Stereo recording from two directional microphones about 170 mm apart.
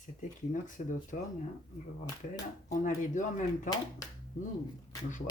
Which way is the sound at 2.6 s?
50° left (ahead or behind).